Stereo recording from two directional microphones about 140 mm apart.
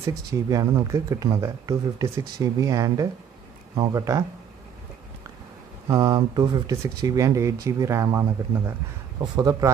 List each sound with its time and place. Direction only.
0.0 s speech: 25° right (ahead or behind)
5.9 s speech: 30° right (ahead or behind)